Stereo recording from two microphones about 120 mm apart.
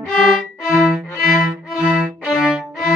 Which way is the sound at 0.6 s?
5° right (ahead or behind).